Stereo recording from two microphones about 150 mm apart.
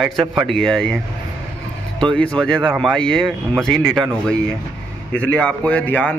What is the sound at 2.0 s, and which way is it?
A man's voice, 5° left (ahead or behind).